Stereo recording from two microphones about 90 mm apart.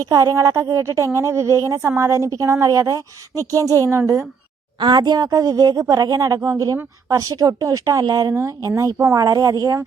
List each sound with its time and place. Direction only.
0.0 s a woman's voice: 40° right (ahead or behind)
4.8 s a woman's voice: 50° right (ahead or behind)